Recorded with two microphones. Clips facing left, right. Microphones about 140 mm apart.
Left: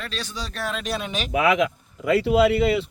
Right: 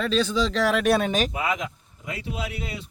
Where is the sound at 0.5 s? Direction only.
80° right; by 1.3 s 45° right (ahead or behind).